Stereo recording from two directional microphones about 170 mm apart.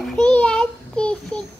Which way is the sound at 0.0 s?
5° left (ahead or behind).